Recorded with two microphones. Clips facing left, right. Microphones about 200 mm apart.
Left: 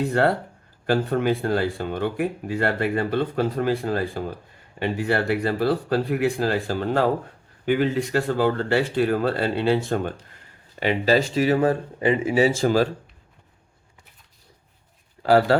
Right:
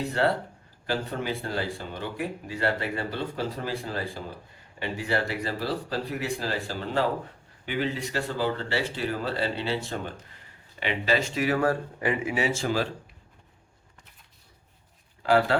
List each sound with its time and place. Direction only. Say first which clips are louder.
0.0 s speech: left 5 dB; 50° left (ahead or behind)
10.8 s speech: left 7 dB; 40° left (ahead or behind)
15.2 s speech: left 5 dB; 40° left (ahead or behind)